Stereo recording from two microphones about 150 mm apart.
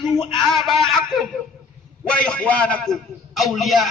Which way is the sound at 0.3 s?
Centre (ahead or behind).